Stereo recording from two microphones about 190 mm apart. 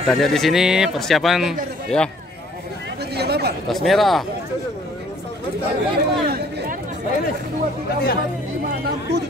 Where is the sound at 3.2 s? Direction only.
60° right (ahead or behind).